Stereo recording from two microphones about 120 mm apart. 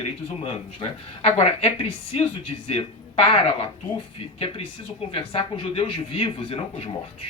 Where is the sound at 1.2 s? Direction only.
55° left (ahead or behind).